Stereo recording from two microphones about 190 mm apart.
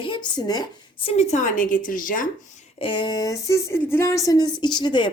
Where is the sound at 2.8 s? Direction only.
25° left (ahead or behind).